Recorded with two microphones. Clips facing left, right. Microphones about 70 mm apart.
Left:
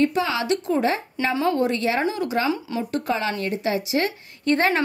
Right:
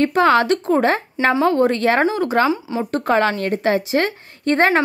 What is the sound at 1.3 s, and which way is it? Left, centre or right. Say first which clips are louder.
Speech: right 5 dB; right.